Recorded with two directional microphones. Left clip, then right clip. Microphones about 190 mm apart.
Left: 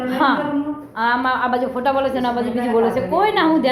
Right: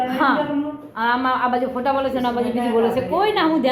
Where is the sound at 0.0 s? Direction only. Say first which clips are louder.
Left 1 dB; 5° right (ahead or behind).